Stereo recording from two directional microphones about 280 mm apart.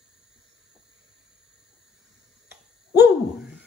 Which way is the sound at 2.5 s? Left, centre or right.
Centre.